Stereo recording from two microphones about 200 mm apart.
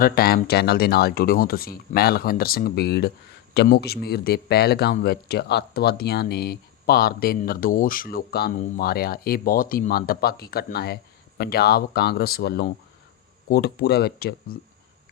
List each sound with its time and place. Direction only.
0.0 s speech: 45° left (ahead or behind)